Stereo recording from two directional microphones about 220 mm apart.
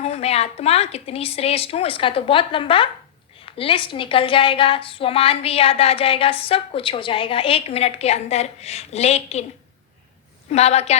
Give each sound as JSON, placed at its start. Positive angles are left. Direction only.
{"t": 0.0, "sound": "a woman's voice", "side_deg": 30}
{"t": 10.5, "sound": "a woman's voice", "side_deg": 30}